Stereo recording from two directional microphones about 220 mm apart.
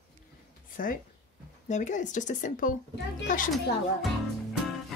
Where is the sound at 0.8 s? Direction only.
40° left (ahead or behind).